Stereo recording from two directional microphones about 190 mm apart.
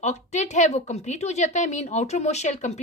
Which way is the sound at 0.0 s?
35° left (ahead or behind).